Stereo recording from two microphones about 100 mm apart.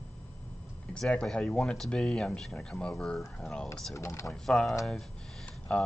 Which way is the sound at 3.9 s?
30° left (ahead or behind).